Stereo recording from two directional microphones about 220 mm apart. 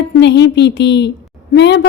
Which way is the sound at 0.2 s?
50° left (ahead or behind).